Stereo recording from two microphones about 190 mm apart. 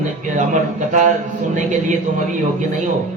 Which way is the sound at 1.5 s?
40° right (ahead or behind).